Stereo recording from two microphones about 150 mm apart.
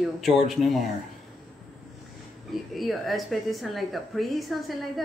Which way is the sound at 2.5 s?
Centre (ahead or behind).